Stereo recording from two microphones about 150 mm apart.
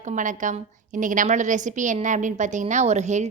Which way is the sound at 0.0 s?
55° right (ahead or behind).